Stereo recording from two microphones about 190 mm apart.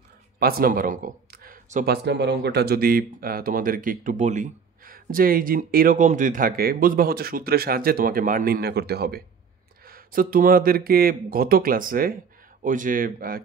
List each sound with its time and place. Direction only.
0.4 s speech: 50° right (ahead or behind)
2.0 s speech: 65° right (ahead or behind); by 13.4 s 50° right (ahead or behind)